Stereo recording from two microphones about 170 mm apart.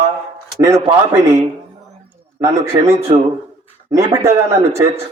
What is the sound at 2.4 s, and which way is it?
Speech, 15° right (ahead or behind).